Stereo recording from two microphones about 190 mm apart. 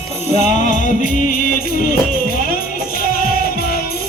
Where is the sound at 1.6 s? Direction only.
50° left (ahead or behind).